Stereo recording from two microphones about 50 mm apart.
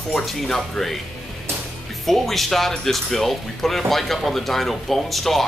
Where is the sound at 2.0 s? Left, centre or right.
Centre.